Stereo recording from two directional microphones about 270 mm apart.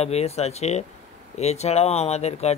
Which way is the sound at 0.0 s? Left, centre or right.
Left.